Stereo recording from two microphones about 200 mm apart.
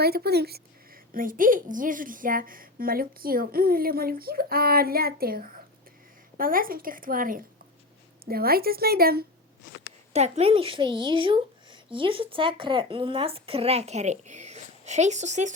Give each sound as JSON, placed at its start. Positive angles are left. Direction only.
{"t": 0.0, "sound": "a woman's voice", "side_deg": -50}
{"t": 10.1, "sound": "speech", "side_deg": -35}